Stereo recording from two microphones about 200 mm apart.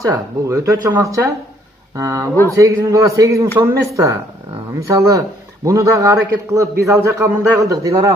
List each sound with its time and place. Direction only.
0.0 s a man's voice: 15° right (ahead or behind)